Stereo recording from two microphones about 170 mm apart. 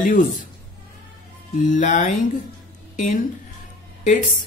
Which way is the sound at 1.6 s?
50° left (ahead or behind).